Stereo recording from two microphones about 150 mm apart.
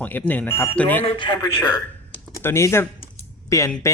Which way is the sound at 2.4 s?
15° left (ahead or behind).